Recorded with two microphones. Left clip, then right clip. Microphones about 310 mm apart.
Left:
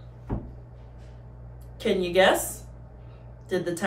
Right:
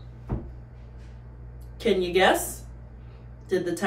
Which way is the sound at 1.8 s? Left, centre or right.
Centre.